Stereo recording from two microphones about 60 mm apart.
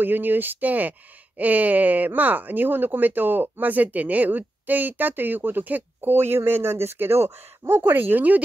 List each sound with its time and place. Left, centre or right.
0.0 s speech: right
6.1 s speech: right